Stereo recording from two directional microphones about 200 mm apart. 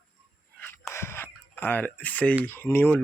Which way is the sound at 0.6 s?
10° left (ahead or behind).